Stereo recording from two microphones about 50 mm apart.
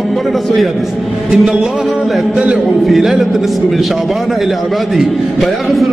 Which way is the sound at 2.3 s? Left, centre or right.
Centre.